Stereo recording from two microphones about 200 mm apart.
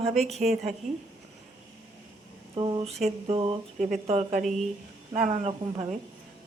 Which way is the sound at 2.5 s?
25° right (ahead or behind).